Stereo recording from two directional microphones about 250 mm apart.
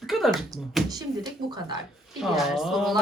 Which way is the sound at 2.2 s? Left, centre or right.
Centre.